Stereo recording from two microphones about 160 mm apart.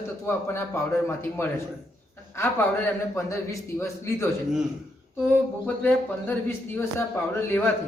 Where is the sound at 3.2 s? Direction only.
20° left (ahead or behind).